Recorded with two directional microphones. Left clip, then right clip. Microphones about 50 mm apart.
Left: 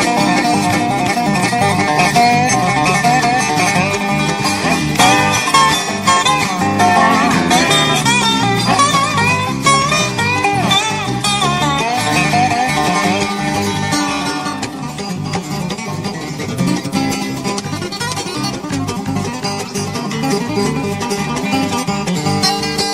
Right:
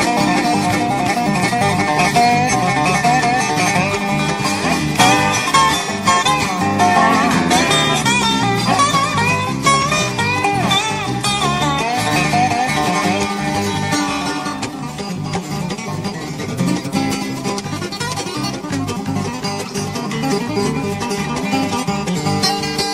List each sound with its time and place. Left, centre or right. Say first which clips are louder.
0.0 s music: left 2 dB; left
16.6 s music: left 2 dB; left
20.2 s music: left 2 dB; left
22.3 s music: left 2 dB; left